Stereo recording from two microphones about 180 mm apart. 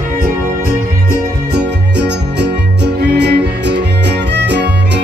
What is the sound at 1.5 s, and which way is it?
Music, 70° right (ahead or behind).